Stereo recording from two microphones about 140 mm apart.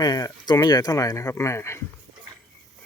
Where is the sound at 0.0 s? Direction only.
25° left (ahead or behind).